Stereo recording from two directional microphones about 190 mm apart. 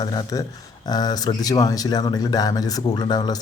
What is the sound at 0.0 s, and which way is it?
Speech, 20° left (ahead or behind).